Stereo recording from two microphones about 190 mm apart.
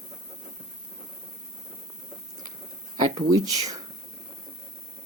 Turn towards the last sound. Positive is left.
turn(degrees=-20)  # may be behind; listen again after turning